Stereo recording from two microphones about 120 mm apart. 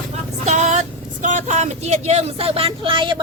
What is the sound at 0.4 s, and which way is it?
Vehicle, 80° right.